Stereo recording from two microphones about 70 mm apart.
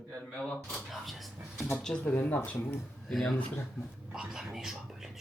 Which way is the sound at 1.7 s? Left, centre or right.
Centre.